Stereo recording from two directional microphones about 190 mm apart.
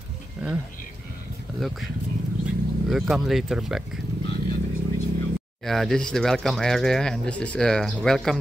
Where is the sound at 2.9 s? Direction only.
Centre (ahead or behind).